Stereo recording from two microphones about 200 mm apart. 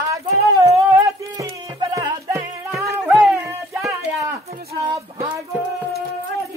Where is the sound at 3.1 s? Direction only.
5° right (ahead or behind).